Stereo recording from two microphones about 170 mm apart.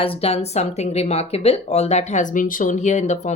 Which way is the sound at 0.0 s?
35° left (ahead or behind).